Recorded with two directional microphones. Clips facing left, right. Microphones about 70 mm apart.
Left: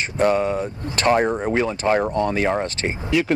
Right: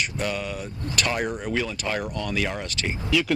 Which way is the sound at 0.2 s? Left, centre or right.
Left.